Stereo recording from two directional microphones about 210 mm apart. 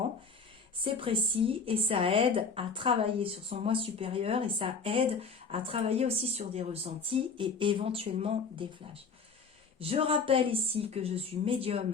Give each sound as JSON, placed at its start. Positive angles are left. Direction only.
{"t": 0.9, "sound": "a woman's voice", "side_deg": -25}